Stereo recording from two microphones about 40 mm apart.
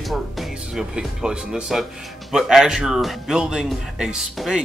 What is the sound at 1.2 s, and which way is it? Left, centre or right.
Speech, centre.